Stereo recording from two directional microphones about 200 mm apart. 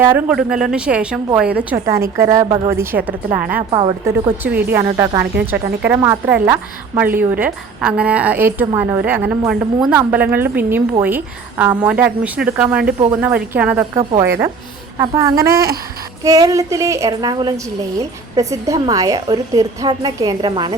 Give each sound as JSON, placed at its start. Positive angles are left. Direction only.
{"t": 0.0, "sound": "a woman's voice", "side_deg": -10}
{"t": 3.7, "sound": "speech", "side_deg": -25}
{"t": 4.4, "sound": "a woman's voice", "side_deg": -10}
{"t": 5.2, "sound": "speech", "side_deg": -55}
{"t": 5.9, "sound": "a woman's voice", "side_deg": -10}
{"t": 15.5, "sound": "speech", "side_deg": -50}
{"t": 16.2, "sound": "a woman's voice", "side_deg": -15}